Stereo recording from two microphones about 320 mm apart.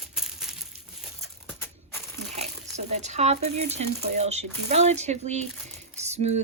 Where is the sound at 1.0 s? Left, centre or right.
Centre.